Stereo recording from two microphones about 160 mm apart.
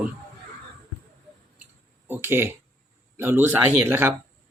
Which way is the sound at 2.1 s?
15° right (ahead or behind).